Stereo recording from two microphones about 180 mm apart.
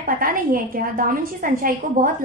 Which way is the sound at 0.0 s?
50° right (ahead or behind).